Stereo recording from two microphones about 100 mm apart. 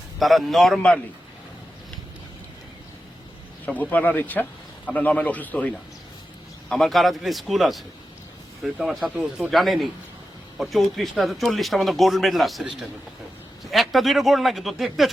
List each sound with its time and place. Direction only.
0.2 s a man's voice: centre (ahead or behind)
3.7 s a man's voice: 15° left (ahead or behind)
6.7 s a man's voice: 5° left (ahead or behind)